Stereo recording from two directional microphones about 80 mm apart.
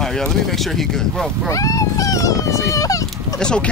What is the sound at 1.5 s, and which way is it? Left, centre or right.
Speech, left.